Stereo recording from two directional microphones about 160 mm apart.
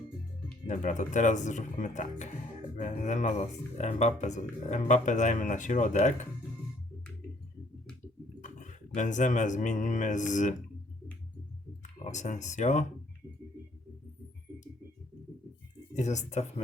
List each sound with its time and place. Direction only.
0.7 s speech: 50° left (ahead or behind)
8.4 s speech: 50° left (ahead or behind)
11.8 s speech: 50° left (ahead or behind)
16.0 s speech: 45° left (ahead or behind)